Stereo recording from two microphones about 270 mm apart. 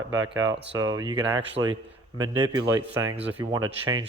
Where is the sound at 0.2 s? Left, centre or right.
Right.